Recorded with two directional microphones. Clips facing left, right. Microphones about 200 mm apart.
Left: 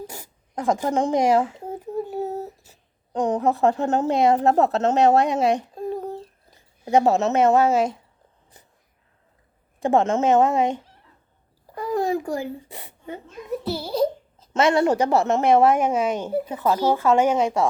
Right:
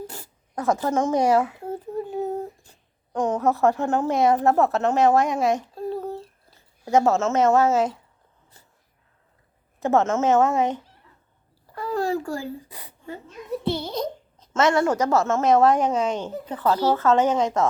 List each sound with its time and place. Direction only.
0.5 s speech: 15° left (ahead or behind)
1.4 s a woman's voice: 30° left (ahead or behind)
1.7 s a sound: 10° left (ahead or behind)
3.7 s a woman's voice: 20° left (ahead or behind)
9.9 s speech: 15° left (ahead or behind)
11.7 s a sound: 15° left (ahead or behind)
13.7 s a sound: 5° left (ahead or behind)
14.5 s a woman's voice: 20° left (ahead or behind)
15.1 s speech: 15° left (ahead or behind)